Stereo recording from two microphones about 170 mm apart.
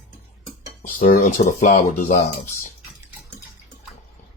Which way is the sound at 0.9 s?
55° left (ahead or behind).